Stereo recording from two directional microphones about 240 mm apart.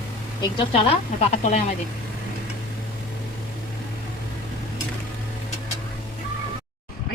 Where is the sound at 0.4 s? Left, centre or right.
Left.